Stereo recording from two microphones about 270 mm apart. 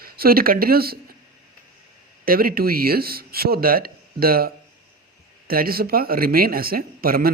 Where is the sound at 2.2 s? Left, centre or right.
Right.